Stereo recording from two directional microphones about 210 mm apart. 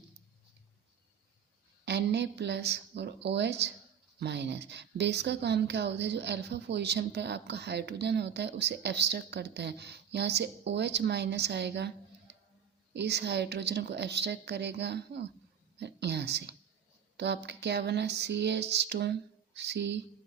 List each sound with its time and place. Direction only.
1.8 s a woman's voice: 55° right (ahead or behind)
12.3 s music: 55° right (ahead or behind)
12.9 s a woman's voice: 55° right (ahead or behind)